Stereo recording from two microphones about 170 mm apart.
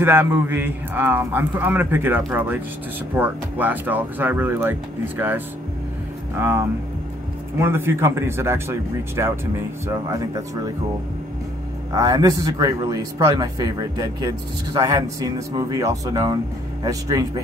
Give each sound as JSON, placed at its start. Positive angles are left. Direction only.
{"t": 0.0, "sound": "a man's voice", "side_deg": -15}
{"t": 11.9, "sound": "a man's voice", "side_deg": -20}